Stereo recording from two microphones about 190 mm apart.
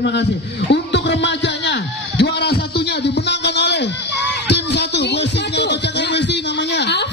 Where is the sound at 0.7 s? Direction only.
65° left (ahead or behind).